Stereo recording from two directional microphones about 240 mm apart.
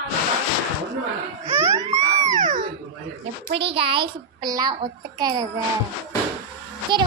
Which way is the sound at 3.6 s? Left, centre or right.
Right.